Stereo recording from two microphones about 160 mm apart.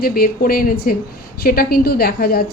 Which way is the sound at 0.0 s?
70° left (ahead or behind).